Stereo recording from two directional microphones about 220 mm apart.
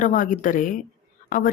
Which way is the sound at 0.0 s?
35° left (ahead or behind).